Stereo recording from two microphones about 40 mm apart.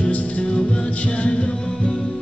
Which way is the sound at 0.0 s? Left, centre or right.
Left.